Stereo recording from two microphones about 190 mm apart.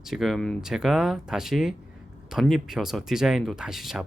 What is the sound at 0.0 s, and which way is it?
Speech, centre (ahead or behind).